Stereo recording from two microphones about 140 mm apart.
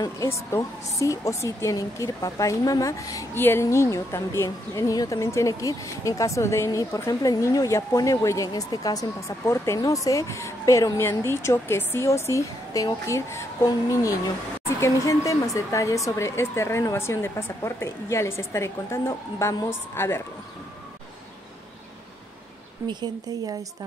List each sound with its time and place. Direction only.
0.0 s a woman's voice: 20° left (ahead or behind)
22.8 s a woman's voice: 30° right (ahead or behind)